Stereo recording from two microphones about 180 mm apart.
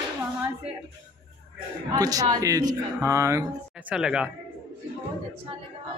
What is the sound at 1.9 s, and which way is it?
Speech, 20° right (ahead or behind).